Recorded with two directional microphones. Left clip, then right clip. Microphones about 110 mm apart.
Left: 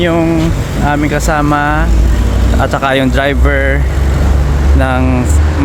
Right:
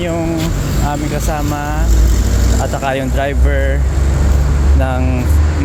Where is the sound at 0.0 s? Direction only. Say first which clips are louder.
Left 6 dB; 55° left (ahead or behind).